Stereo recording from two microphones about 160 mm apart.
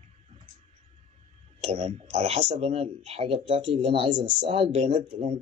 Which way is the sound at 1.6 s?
40° right (ahead or behind).